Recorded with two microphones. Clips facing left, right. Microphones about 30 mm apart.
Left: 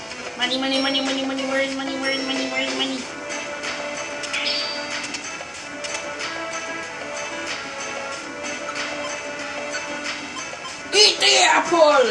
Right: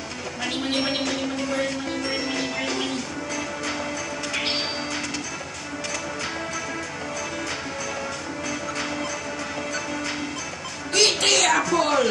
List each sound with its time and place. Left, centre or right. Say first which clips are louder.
0.5 s a woman's voice: left 3 dB; left
0.7 s speech: left 3 dB; centre
2.0 s music: left 5 dB; centre
4.3 s music: left 2 dB; centre
10.9 s music: left 4 dB; left
11.3 s speech: left 4 dB; left